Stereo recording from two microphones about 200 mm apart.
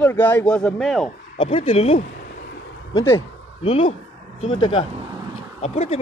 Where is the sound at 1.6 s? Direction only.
30° left (ahead or behind).